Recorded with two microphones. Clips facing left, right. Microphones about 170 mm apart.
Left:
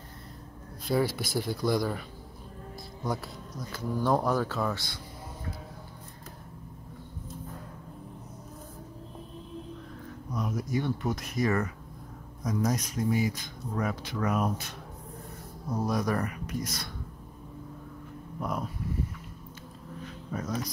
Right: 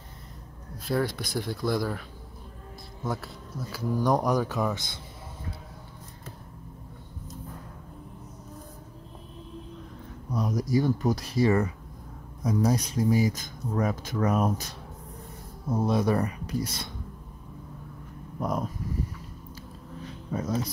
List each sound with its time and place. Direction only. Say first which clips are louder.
0.8 s speech: even; centre (ahead or behind); by 5.0 s 20° right (ahead or behind)
10.3 s speech: right 5 dB; 35° right (ahead or behind)
15.7 s speech: right 4 dB; 25° right (ahead or behind)
18.4 s speech: right 4 dB; 40° right (ahead or behind)
20.2 s speech: right 4 dB; 25° right (ahead or behind)